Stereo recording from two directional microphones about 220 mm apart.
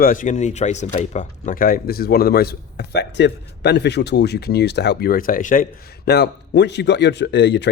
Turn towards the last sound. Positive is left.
turn(degrees=50)  # may be behind; listen again after turning